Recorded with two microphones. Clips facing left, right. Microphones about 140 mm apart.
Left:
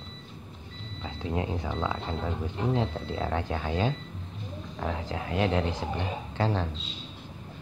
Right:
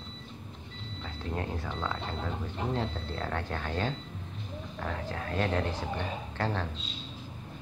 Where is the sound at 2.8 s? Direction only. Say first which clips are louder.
Left 4 dB; 10° left (ahead or behind).